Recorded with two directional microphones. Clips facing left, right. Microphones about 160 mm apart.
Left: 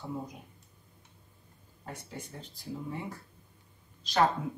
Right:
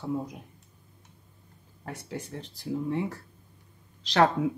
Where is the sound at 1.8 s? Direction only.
80° right.